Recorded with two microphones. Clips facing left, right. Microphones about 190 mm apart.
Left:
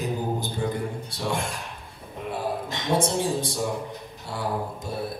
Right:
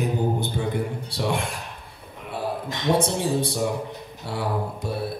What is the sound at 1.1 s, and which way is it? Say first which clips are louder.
Speech: right 3 dB; 65° right (ahead or behind).